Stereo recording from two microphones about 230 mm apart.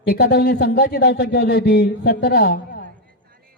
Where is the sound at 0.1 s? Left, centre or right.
Left.